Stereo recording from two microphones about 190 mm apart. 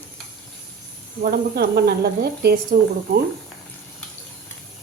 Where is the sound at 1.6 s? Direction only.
55° right (ahead or behind).